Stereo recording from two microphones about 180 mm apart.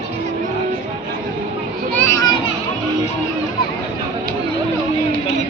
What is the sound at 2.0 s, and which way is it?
Children playing, 15° left (ahead or behind).